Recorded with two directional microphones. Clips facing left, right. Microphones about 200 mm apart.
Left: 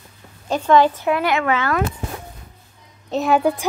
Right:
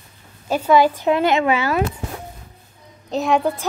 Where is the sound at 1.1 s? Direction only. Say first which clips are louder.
Right 2 dB; 25° right (ahead or behind).